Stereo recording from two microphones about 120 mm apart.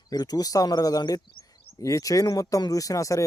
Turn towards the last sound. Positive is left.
turn(degrees=25)  # may be behind; listen again after turning